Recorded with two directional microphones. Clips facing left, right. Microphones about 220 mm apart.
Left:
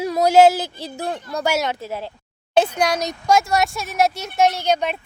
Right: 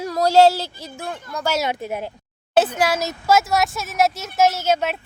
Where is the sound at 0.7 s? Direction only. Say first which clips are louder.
Left 4 dB; 35° left (ahead or behind).